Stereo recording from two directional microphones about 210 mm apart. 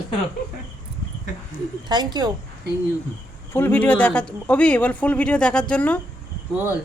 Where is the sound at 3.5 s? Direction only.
10° left (ahead or behind).